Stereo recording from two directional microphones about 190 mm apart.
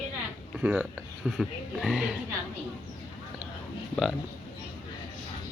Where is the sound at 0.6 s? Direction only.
10° right (ahead or behind).